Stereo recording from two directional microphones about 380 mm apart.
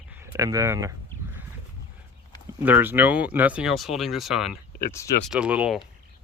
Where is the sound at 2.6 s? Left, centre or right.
Centre.